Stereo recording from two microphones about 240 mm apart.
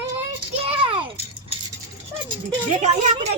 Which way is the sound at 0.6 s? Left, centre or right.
Right.